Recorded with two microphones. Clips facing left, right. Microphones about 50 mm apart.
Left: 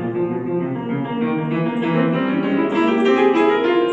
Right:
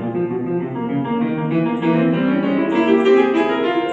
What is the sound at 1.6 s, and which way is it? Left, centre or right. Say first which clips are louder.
Piano: right 4 dB; left.